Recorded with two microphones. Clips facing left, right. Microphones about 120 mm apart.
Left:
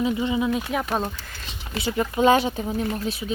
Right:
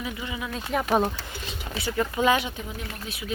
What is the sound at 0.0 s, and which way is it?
Speech, 25° left (ahead or behind).